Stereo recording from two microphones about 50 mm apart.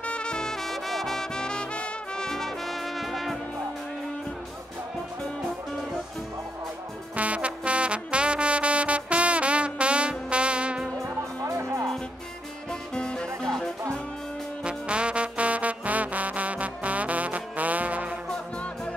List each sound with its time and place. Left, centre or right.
0.0 s music: left
2.2 s brass instrument: centre
7.2 s music: right
11.6 s music: right
12.9 s music: centre
14.6 s music: right
18.3 s music: left